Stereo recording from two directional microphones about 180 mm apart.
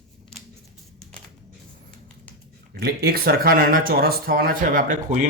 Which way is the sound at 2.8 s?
60° right (ahead or behind).